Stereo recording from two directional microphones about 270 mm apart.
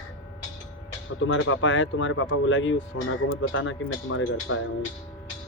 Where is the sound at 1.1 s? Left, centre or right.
Left.